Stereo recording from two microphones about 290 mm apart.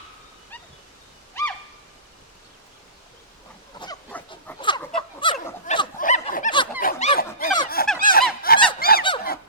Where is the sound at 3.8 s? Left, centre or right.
Centre; by 7.4 s left.